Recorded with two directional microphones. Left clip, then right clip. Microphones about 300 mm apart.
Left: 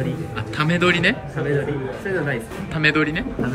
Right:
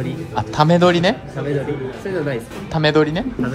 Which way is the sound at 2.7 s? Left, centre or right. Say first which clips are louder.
Right 3 dB; centre.